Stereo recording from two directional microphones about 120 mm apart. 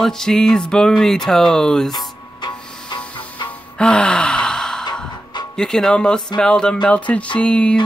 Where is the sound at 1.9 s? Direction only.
35° left (ahead or behind).